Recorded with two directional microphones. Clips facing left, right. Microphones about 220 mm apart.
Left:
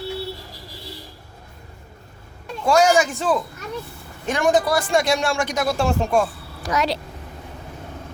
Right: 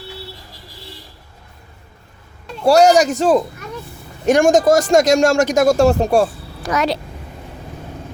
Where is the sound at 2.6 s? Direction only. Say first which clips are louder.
Right 6 dB; 40° right (ahead or behind).